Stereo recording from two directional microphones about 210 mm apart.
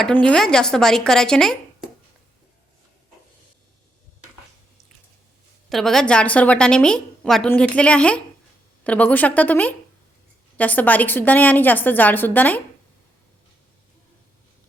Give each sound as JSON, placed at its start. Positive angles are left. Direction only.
{"t": 0.0, "sound": "a woman's voice", "side_deg": 5}
{"t": 5.6, "sound": "a woman's voice", "side_deg": 0}